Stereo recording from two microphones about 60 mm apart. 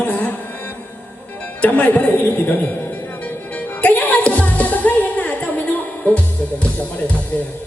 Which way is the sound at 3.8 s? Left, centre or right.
Left.